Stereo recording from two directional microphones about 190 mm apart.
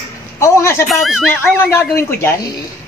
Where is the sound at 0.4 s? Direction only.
15° left (ahead or behind).